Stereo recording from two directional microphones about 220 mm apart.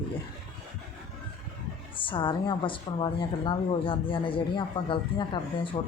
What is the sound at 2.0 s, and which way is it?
A woman's voice, 20° left (ahead or behind).